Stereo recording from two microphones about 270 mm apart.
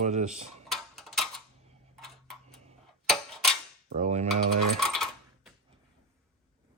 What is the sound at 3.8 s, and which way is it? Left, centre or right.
Cutlery, right.